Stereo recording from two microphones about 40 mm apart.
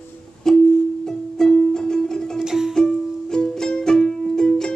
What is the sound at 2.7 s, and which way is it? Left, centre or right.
Music, centre.